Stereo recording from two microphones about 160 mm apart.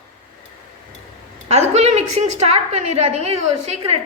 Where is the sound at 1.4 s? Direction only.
40° right (ahead or behind).